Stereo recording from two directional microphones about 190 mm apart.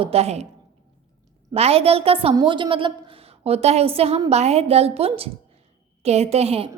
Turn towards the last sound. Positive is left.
turn(degrees=-30)  # may be behind; listen again after turning